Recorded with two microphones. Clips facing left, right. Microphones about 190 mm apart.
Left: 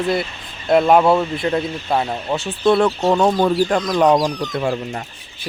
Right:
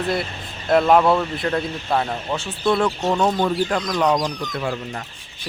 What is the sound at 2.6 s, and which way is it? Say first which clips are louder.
Speech: left 5 dB; 40° left (ahead or behind).